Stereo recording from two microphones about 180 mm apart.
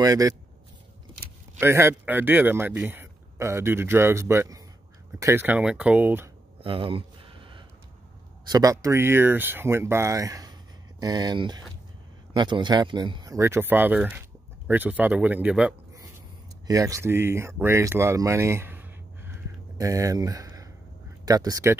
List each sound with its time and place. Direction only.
0.0 s speech: 20° right (ahead or behind)
1.6 s speech: 15° right (ahead or behind)
6.6 s a sound: 30° right (ahead or behind)
8.5 s speech: 20° right (ahead or behind)
16.6 s speech: 20° right (ahead or behind)